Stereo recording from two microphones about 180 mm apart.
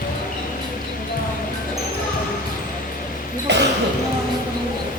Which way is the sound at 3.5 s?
70° right (ahead or behind).